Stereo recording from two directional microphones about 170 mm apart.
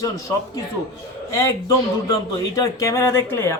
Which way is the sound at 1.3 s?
15° left (ahead or behind).